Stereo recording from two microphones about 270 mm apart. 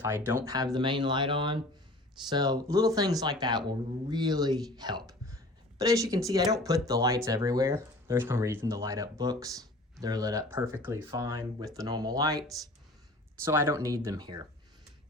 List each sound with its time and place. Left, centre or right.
0.0 s speech: centre
13.4 s speech: centre